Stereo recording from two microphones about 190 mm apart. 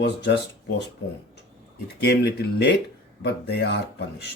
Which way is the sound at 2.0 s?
60° left (ahead or behind).